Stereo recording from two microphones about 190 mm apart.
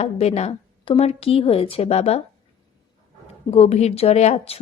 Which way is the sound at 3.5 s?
35° left (ahead or behind).